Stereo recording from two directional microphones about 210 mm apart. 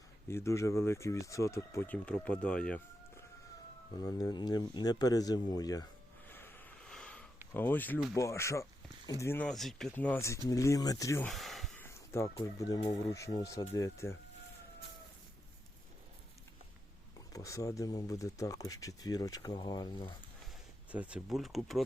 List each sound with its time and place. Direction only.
0.3 s speech: 15° left (ahead or behind)
3.9 s speech: 20° left (ahead or behind)
6.2 s snort: 10° left (ahead or behind)
7.5 s speech: 10° left (ahead or behind)
11.3 s a sound: centre (ahead or behind)
12.4 s speech: 20° left (ahead or behind)
17.3 s speech: 15° left (ahead or behind)
20.9 s speech: 5° right (ahead or behind)